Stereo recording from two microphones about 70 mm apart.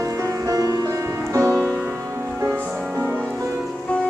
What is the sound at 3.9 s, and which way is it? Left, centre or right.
Music, centre.